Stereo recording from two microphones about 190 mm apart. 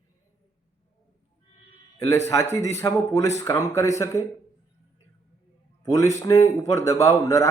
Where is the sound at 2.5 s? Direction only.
15° left (ahead or behind).